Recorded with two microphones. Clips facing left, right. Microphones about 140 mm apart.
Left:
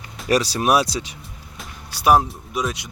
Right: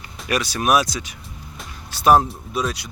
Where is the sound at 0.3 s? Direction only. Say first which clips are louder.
Left 2 dB; 35° left (ahead or behind).